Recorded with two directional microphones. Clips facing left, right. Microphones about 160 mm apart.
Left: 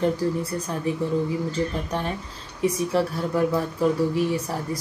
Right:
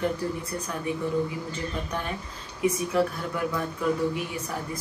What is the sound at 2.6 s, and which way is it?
Speech, 35° left (ahead or behind).